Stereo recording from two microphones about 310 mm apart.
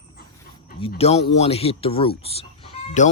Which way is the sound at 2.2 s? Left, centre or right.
Centre.